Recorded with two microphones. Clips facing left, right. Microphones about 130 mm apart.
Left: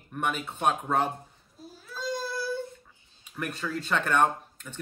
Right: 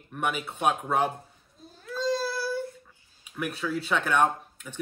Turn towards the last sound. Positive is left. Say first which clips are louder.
# right 3 dB
turn(degrees=-5)  # may be behind; listen again after turning